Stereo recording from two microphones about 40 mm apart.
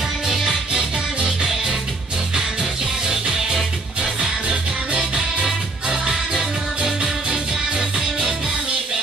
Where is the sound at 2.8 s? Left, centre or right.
Centre.